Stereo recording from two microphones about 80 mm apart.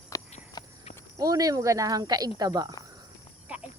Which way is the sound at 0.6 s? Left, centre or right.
Left.